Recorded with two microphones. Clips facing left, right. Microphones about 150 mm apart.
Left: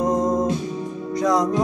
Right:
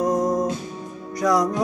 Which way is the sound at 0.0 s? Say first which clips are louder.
Left 1 dB; 25° left (ahead or behind).